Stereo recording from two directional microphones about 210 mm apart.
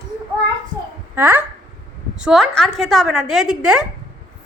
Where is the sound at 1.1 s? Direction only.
10° right (ahead or behind).